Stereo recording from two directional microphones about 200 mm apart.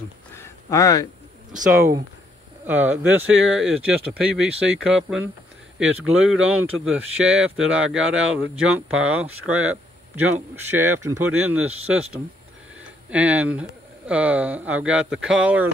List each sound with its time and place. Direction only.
0.4 s a sound: 15° left (ahead or behind)
1.7 s speech: 15° right (ahead or behind)
13.1 s speech: 5° right (ahead or behind)